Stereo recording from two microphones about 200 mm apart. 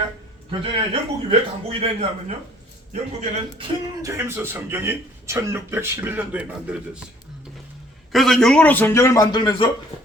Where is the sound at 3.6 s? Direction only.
15° right (ahead or behind).